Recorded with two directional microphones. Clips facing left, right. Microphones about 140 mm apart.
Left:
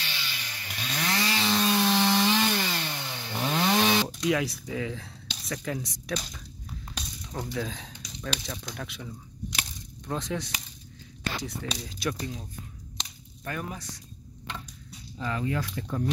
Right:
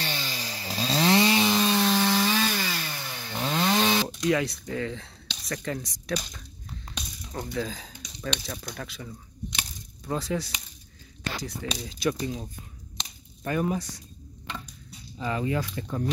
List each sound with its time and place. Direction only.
0.0 s chainsaw: 35° right (ahead or behind); by 1.6 s 20° right (ahead or behind)
1.6 s wood: 5° left (ahead or behind)
2.2 s chainsaw: 15° left (ahead or behind)
4.2 s speech: centre (ahead or behind)
7.5 s speech: centre (ahead or behind)
13.4 s speech: 20° right (ahead or behind)
15.2 s speech: 10° right (ahead or behind)